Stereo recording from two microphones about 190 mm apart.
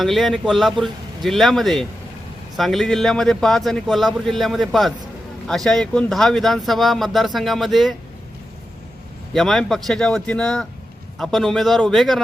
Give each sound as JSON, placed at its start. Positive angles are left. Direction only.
{"t": 0.0, "sound": "speech", "side_deg": 0}
{"t": 9.3, "sound": "speech", "side_deg": 0}